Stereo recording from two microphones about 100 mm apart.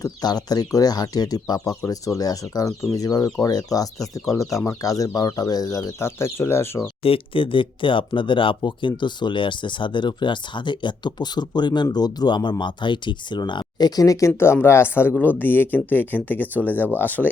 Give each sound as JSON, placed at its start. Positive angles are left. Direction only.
{"t": 0.0, "sound": "speech", "side_deg": 40}
{"t": 7.0, "sound": "speech", "side_deg": 65}